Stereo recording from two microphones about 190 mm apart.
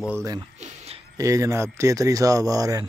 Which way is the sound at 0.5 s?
35° right (ahead or behind).